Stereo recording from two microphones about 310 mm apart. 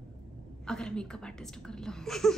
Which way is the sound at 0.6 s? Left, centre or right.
Centre.